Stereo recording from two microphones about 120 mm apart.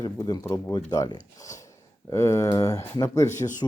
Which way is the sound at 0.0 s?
30° left (ahead or behind).